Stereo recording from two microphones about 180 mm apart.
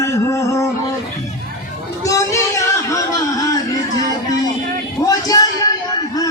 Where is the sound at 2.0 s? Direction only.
15° left (ahead or behind).